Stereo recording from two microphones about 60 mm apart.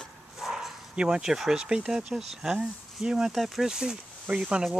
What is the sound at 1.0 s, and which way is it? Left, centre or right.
Speech, centre.